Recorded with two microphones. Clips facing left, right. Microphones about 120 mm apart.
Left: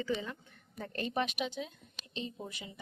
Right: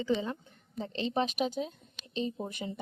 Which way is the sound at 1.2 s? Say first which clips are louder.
Right 5 dB; 40° right (ahead or behind).